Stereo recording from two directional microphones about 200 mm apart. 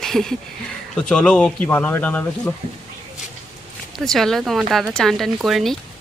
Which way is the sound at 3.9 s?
Centre (ahead or behind).